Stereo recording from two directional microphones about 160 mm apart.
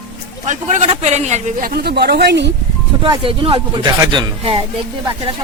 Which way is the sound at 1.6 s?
85° right.